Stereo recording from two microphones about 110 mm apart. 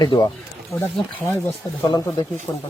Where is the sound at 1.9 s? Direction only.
45° left (ahead or behind).